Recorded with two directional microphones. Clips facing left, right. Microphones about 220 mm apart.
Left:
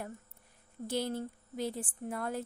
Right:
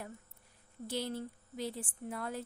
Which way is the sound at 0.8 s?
50° left (ahead or behind).